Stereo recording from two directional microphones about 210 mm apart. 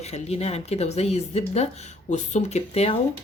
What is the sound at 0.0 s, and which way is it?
Speech, 30° left (ahead or behind).